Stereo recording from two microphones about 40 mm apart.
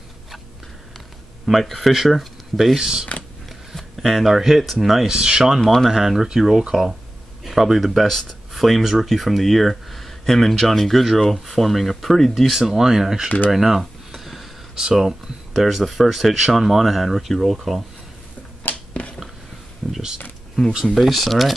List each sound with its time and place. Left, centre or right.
1.4 s speech: centre
3.1 s creak: left
3.4 s a sound: centre
4.8 s speech: centre
5.1 s speech: right
5.6 s speech: centre
5.9 s speech: centre
12.5 s speech: centre
13.5 s a sound: centre
14.8 s speech: centre
18.7 s a sound: left
19.8 s a sound: centre
20.8 s speech: centre